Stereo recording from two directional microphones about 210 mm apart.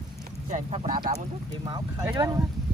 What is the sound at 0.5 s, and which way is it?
Speech, 30° right (ahead or behind).